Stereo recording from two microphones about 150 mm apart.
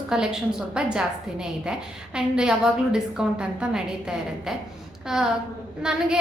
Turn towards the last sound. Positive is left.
turn(degrees=-5)  # may be behind; listen again after turning